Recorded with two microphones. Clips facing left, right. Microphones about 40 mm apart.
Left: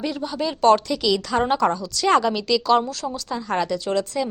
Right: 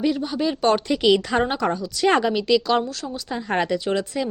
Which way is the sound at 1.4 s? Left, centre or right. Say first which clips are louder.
Left 2 dB; centre.